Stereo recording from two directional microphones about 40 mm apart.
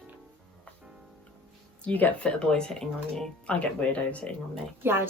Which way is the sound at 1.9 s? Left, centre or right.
Left.